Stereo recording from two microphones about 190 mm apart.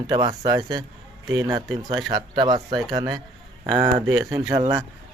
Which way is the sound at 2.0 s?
20° right (ahead or behind).